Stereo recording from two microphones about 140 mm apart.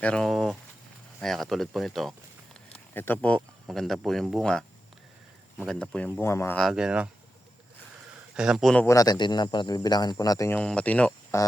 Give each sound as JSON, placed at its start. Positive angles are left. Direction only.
{"t": 0.0, "sound": "speech", "side_deg": 5}
{"t": 2.9, "sound": "speech", "side_deg": 15}
{"t": 5.6, "sound": "speech", "side_deg": 5}
{"t": 6.2, "sound": "speech", "side_deg": 20}
{"t": 6.6, "sound": "speech", "side_deg": 0}
{"t": 8.4, "sound": "speech", "side_deg": -5}
{"t": 8.9, "sound": "speech", "side_deg": 25}
{"t": 10.5, "sound": "speech", "side_deg": 10}